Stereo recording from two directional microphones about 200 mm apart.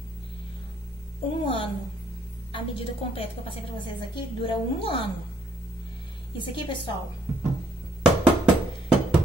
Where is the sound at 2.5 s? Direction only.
25° left (ahead or behind).